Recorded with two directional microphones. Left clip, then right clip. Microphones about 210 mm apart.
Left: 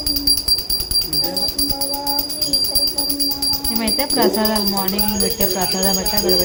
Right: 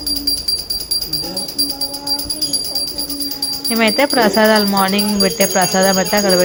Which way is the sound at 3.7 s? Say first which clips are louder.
Right 9 dB; 20° right (ahead or behind).